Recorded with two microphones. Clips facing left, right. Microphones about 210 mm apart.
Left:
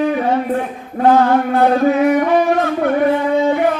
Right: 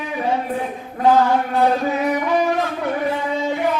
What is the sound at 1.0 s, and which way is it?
Singing, 60° left (ahead or behind).